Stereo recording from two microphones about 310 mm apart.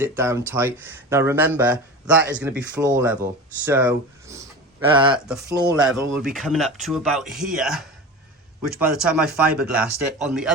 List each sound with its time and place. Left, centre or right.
0.0 s speech: centre
5.1 s speech: centre
9.1 s speech: centre